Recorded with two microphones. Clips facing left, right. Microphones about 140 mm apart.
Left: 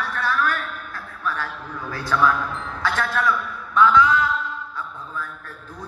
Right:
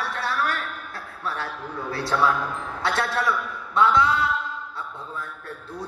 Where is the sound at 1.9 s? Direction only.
30° right (ahead or behind).